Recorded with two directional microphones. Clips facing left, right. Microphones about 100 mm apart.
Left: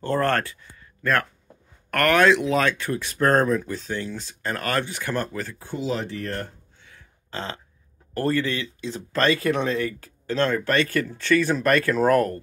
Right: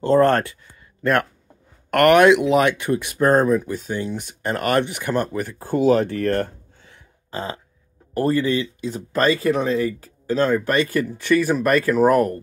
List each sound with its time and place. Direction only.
0.0 s speech: 20° right (ahead or behind)
1.9 s speech: 25° right (ahead or behind)
5.6 s speech: 50° right (ahead or behind)
7.2 s speech: 10° right (ahead or behind)